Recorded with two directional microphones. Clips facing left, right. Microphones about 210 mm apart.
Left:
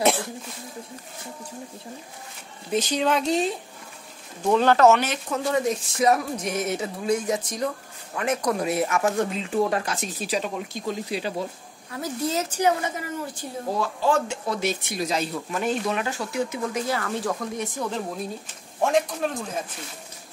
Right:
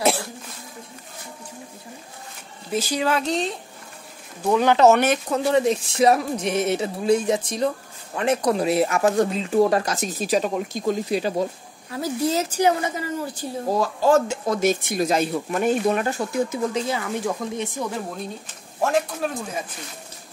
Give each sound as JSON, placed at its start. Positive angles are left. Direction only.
{"t": 0.0, "sound": "cough", "side_deg": 0}
{"t": 2.7, "sound": "speech", "side_deg": -5}
{"t": 4.6, "sound": "speech", "side_deg": -15}
{"t": 4.9, "sound": "speech", "side_deg": -55}
{"t": 5.3, "sound": "a woman's voice", "side_deg": -30}
{"t": 11.9, "sound": "a woman's voice", "side_deg": -30}
{"t": 16.8, "sound": "speech", "side_deg": -20}